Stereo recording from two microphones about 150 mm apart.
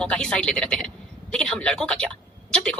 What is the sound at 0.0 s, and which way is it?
A woman's voice, 5° left (ahead or behind).